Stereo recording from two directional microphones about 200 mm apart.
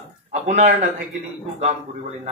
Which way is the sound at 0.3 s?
35° right (ahead or behind).